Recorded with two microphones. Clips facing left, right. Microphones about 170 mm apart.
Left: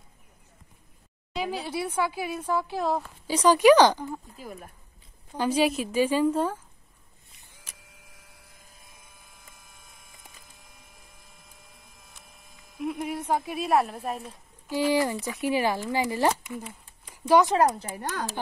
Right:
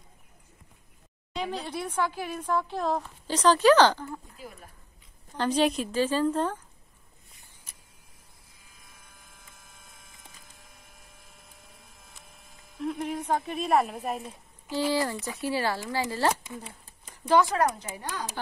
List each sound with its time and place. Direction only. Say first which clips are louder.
1.3 s speech: left 2 dB; 5° left (ahead or behind)
5.4 s speech: left 1 dB; 10° left (ahead or behind)
7.6 s a sound: left 4 dB; 90° left
9.3 s splinter: left 1 dB; centre (ahead or behind)
12.0 s printer: even; centre (ahead or behind)
12.7 s a sound: even; 5° left (ahead or behind)
13.3 s speech: left 1 dB; 5° left (ahead or behind)
14.7 s speech: left 3 dB; 15° left (ahead or behind)
16.6 s a sound: left 3 dB; 40° right (ahead or behind)
17.3 s speech: left 3 dB; 15° left (ahead or behind)
17.6 s speech: left 3 dB; 30° left (ahead or behind)
17.9 s speech: left 3 dB; 45° left (ahead or behind)